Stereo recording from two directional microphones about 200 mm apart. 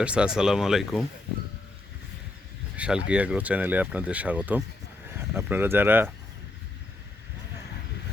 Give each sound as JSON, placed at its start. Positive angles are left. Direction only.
{"t": 0.0, "sound": "speech", "side_deg": -5}
{"t": 2.7, "sound": "speech", "side_deg": -5}